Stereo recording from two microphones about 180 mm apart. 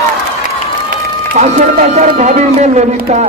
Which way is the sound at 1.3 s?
40° right (ahead or behind).